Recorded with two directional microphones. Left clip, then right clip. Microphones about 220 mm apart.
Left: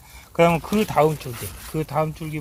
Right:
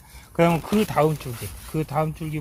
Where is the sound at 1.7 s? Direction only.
10° left (ahead or behind).